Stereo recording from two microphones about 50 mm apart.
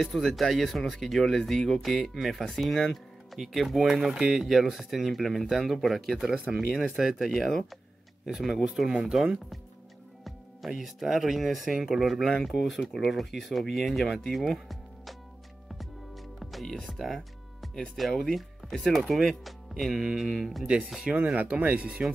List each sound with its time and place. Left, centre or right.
0.0 s speech: centre
10.8 s speech: centre
16.6 s speech: centre
17.0 s music: centre
17.9 s speech: centre
21.2 s speech: right